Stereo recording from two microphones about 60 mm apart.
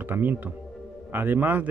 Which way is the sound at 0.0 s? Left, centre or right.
Right.